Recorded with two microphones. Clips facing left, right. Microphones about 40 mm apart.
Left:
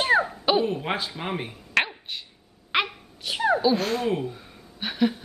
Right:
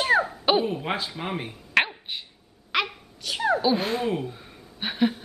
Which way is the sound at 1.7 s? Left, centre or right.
Centre.